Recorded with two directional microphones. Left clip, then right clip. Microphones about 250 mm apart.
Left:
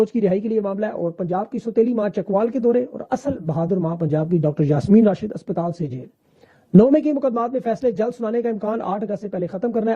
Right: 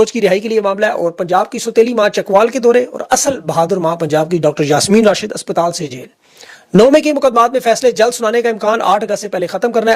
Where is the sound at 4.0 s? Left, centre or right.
Centre.